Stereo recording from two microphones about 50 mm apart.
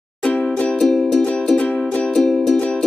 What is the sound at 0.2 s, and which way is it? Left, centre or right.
Music, left.